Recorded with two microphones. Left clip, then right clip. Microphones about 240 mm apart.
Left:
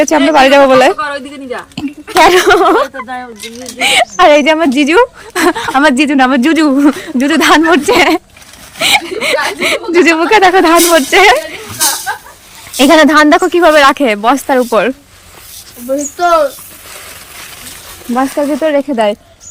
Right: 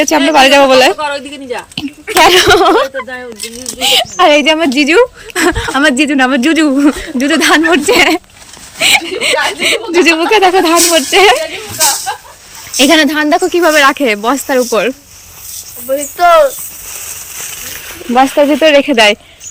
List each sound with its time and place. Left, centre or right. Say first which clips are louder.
0.0 s a woman's voice: even; centre
12.7 s a woman's voice: left 3 dB; centre
16.2 s speech: right 3 dB; right
18.1 s speech: right 5 dB; centre